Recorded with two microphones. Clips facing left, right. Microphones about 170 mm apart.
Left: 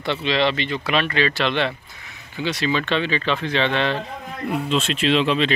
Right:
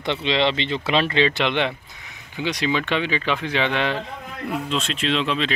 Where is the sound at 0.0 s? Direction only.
20° right (ahead or behind).